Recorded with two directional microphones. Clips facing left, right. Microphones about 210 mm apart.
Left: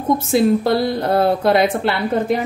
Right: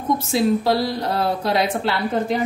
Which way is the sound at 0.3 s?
55° left (ahead or behind).